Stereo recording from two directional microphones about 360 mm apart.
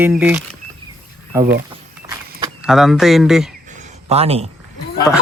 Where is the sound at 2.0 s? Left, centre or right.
Centre.